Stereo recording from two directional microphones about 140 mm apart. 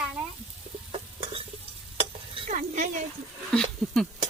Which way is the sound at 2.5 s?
65° right (ahead or behind).